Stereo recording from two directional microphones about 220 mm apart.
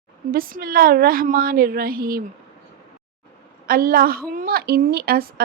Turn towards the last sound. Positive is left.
turn(degrees=-45)  # may be behind; listen again after turning